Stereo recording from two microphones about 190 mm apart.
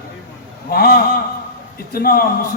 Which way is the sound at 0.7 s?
55° left (ahead or behind).